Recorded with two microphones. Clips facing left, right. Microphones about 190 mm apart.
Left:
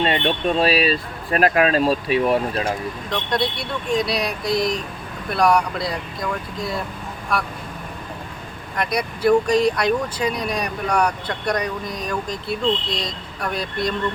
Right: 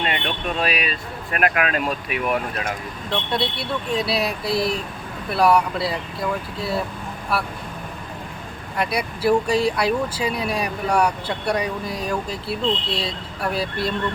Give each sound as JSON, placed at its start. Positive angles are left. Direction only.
{"t": 0.0, "sound": "speech", "side_deg": 30}
{"t": 3.1, "sound": "speech", "side_deg": -5}
{"t": 7.3, "sound": "speech", "side_deg": -5}
{"t": 8.8, "sound": "speech", "side_deg": -5}